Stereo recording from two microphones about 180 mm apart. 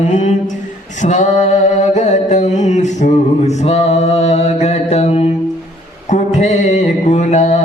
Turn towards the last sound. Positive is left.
turn(degrees=40)  # may be behind; listen again after turning